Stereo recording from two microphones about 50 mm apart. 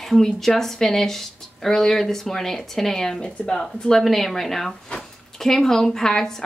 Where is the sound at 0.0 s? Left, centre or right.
Centre.